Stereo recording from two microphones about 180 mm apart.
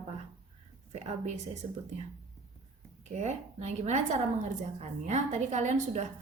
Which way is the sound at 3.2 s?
40° right (ahead or behind).